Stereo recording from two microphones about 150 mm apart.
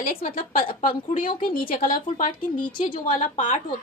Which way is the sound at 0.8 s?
65° left (ahead or behind).